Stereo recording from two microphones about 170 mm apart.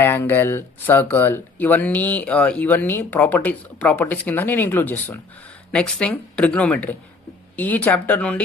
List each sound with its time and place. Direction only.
0.0 s speech: 15° left (ahead or behind)